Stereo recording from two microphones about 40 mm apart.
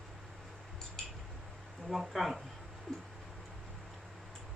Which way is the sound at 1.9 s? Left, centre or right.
Centre.